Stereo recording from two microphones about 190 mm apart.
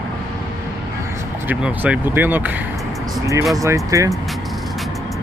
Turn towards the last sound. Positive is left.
turn(degrees=-15)  # may be behind; listen again after turning